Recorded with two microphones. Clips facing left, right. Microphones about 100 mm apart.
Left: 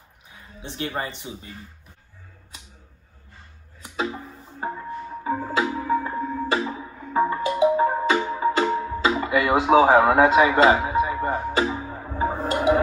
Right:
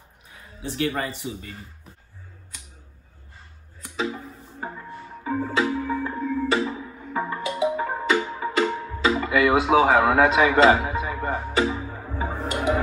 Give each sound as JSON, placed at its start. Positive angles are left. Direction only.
{"t": 0.6, "sound": "speech", "side_deg": 25}
{"t": 4.0, "sound": "music", "side_deg": 30}
{"t": 4.7, "sound": "music", "side_deg": 20}